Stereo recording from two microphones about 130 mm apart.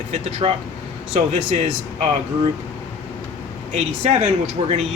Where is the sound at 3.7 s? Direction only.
60° right (ahead or behind).